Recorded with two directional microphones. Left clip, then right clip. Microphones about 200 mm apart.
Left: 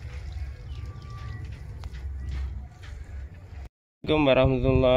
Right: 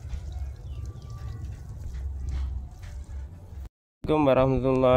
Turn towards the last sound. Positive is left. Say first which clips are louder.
# even
turn(degrees=-5)  # may be behind; listen again after turning